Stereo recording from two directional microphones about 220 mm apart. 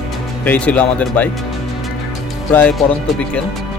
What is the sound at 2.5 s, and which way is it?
Speech, 5° left (ahead or behind).